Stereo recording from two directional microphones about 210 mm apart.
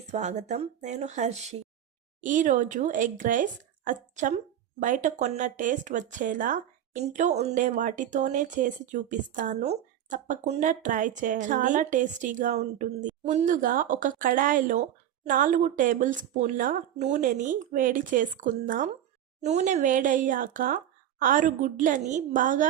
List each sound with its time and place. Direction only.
0.1 s speech: 35° right (ahead or behind)